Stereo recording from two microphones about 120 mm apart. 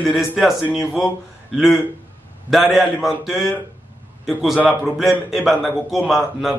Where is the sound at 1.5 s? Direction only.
Centre (ahead or behind).